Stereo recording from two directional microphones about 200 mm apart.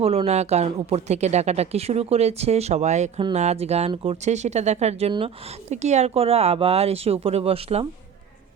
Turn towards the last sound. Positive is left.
turn(degrees=-30)  # may be behind; listen again after turning